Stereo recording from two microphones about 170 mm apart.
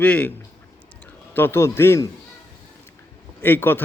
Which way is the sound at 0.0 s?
10° left (ahead or behind).